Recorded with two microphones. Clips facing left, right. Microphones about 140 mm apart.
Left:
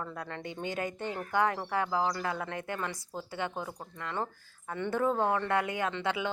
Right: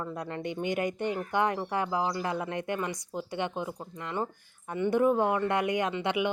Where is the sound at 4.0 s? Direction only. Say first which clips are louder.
Right 2 dB; 20° right (ahead or behind).